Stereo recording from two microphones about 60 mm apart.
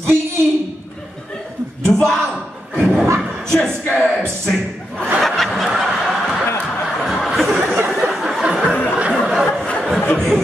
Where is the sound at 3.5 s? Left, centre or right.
Centre.